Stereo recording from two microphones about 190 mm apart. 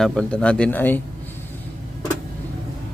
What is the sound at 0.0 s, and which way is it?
Speech, centre (ahead or behind).